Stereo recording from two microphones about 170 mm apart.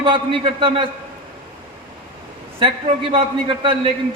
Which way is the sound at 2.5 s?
35° right (ahead or behind).